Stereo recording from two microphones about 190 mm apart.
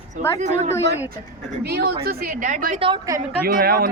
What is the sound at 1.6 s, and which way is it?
A man's voice, 60° right (ahead or behind).